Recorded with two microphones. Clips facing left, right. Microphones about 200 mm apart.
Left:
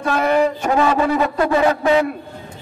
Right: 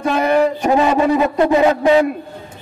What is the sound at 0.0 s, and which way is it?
A man's voice, 15° right (ahead or behind).